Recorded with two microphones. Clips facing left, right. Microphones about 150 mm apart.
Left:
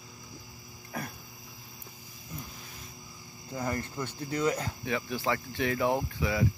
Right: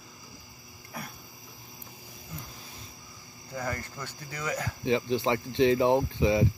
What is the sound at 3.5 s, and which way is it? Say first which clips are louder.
Cricket: left 2 dB; 20° left (ahead or behind).